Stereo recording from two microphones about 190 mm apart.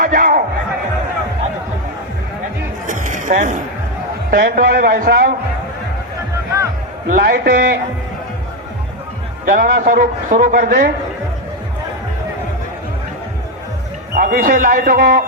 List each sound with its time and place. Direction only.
0.0 s a sound: 45° right (ahead or behind)
2.8 s music: 40° right (ahead or behind)
4.3 s speech: 50° right (ahead or behind)
7.1 s speech: 50° right (ahead or behind)
9.6 s speech: 45° right (ahead or behind)
14.2 s speech: 50° right (ahead or behind)